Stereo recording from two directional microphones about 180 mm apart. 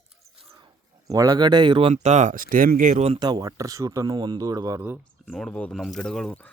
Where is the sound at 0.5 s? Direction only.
20° right (ahead or behind).